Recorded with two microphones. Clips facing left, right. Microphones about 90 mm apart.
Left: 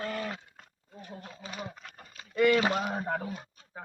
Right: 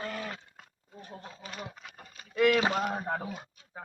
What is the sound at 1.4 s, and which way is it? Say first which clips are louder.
A man's voice: left 3 dB; centre (ahead or behind).